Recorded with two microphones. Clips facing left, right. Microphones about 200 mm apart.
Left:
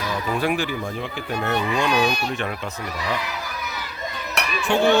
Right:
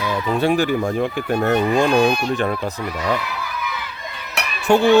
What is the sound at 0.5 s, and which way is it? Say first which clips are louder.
Speech: right 7 dB; 45° right (ahead or behind).